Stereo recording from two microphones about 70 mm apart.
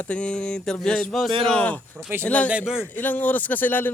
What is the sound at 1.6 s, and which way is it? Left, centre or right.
A man's voice, left.